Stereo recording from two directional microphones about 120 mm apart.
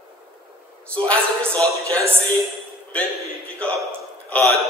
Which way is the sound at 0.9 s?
10° left (ahead or behind).